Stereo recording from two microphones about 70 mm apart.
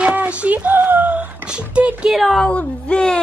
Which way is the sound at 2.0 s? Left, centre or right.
Centre.